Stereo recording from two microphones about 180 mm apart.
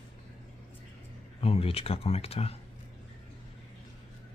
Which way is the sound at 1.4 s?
35° left (ahead or behind).